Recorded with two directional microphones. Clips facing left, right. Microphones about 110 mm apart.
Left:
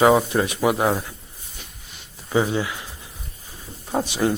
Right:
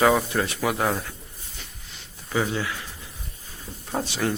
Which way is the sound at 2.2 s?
20° left (ahead or behind).